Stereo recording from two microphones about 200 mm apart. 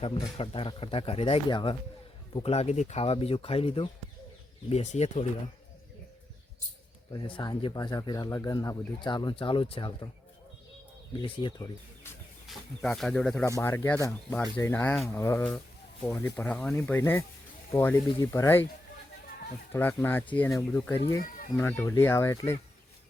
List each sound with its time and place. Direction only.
0.0 s speech: 30° left (ahead or behind)
7.1 s speech: 25° left (ahead or behind)
11.2 s speech: 25° left (ahead or behind)
12.5 s speech: centre (ahead or behind)
19.7 s speech: 10° left (ahead or behind)